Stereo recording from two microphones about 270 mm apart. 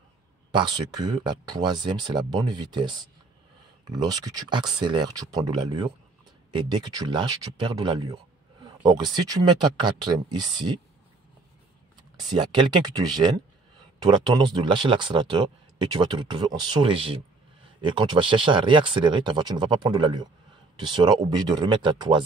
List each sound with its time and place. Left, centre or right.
0.5 s speech: centre
12.3 s speech: centre